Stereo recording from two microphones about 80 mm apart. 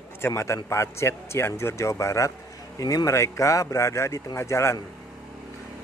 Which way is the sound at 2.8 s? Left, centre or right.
Left.